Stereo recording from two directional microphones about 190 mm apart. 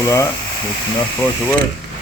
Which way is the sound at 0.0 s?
15° left (ahead or behind).